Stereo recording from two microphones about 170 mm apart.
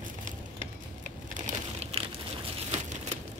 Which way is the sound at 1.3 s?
40° right (ahead or behind).